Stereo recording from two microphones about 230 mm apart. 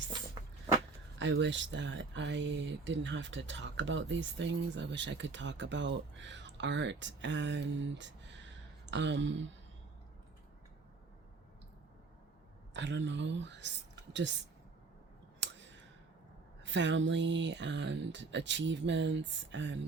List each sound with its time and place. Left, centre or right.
1.2 s speech: right
12.7 s speech: right
15.4 s a sound: right
16.6 s speech: right